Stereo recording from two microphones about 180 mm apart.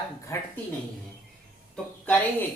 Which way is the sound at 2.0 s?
10° left (ahead or behind).